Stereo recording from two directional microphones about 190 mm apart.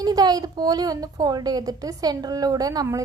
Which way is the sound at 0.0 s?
20° right (ahead or behind).